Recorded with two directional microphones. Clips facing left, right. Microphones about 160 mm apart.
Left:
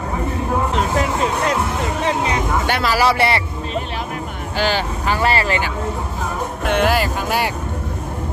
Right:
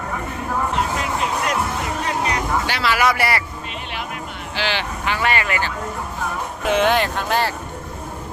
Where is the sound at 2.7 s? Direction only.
55° left (ahead or behind).